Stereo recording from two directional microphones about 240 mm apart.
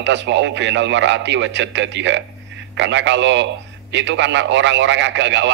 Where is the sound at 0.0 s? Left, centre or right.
Right.